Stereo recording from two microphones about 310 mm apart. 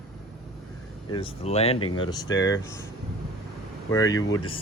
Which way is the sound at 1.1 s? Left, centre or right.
Centre.